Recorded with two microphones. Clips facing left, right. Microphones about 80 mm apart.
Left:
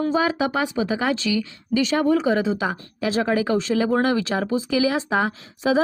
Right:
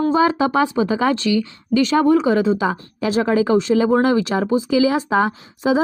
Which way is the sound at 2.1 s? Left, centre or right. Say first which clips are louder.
Right 4 dB; right.